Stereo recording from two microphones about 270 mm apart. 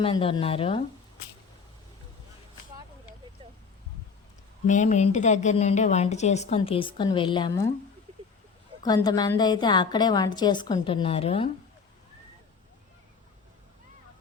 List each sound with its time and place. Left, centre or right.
0.0 s a woman's voice: centre
4.6 s a woman's voice: left
8.8 s a woman's voice: centre